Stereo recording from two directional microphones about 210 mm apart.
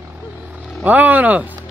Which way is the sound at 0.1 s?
5° right (ahead or behind).